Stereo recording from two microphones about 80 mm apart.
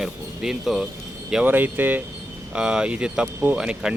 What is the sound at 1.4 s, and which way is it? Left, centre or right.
Speech, right.